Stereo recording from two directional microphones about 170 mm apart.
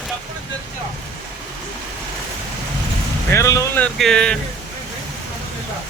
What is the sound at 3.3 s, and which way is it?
Speech, 20° left (ahead or behind).